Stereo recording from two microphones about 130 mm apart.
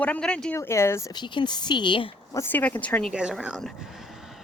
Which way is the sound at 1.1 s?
35° left (ahead or behind).